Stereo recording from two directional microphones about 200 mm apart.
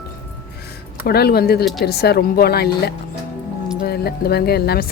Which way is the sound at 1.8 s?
55° left (ahead or behind).